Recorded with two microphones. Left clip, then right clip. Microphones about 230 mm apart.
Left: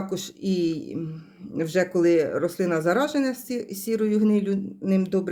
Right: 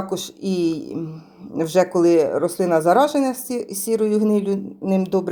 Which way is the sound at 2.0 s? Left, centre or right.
Centre.